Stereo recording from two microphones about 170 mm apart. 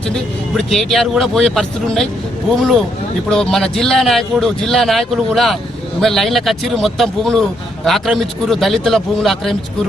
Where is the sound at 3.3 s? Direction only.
Centre (ahead or behind).